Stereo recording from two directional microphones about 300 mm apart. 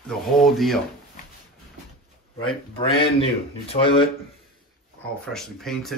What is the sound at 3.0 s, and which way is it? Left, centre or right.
Speech, centre.